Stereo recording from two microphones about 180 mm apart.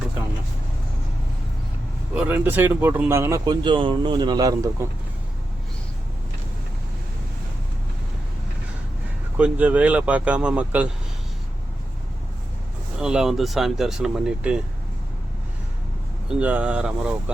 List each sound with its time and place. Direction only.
2.1 s speech: 10° right (ahead or behind)
9.4 s speech: 10° right (ahead or behind)
13.0 s speech: 5° right (ahead or behind)
16.3 s speech: 10° right (ahead or behind)